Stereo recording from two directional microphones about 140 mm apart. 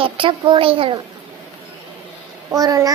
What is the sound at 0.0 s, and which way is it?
Speech, 40° right (ahead or behind).